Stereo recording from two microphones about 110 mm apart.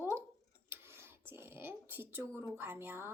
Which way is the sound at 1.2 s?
20° right (ahead or behind).